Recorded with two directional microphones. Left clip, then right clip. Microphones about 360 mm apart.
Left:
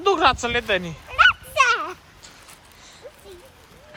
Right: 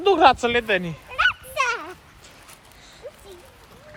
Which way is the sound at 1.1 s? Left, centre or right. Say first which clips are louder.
Left 5 dB; left.